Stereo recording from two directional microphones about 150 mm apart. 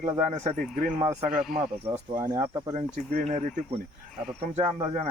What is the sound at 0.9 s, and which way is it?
Speech, 25° right (ahead or behind).